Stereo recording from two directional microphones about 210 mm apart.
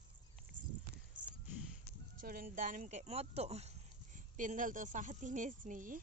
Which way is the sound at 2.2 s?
45° right (ahead or behind).